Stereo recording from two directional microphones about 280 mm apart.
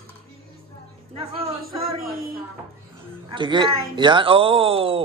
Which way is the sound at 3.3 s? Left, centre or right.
Centre.